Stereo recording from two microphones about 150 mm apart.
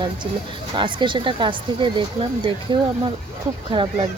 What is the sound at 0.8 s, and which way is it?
Speech, 30° right (ahead or behind).